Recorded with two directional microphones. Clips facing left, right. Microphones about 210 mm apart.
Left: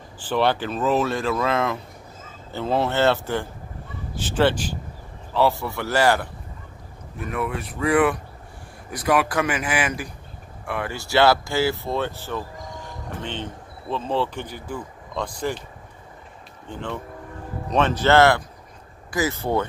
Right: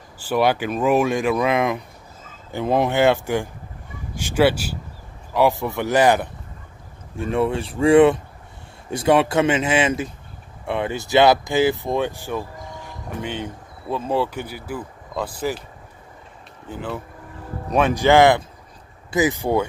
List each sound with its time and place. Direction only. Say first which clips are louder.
0.2 s speech: right 2 dB; 10° right (ahead or behind)
16.6 s speech: right 2 dB; 5° right (ahead or behind)